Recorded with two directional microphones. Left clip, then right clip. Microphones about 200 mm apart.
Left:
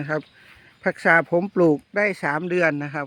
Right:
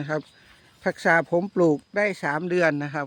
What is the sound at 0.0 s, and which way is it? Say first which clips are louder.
Speech: left 2 dB; 10° left (ahead or behind).